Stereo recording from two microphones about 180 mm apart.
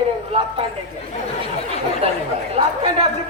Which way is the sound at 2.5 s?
35° right (ahead or behind).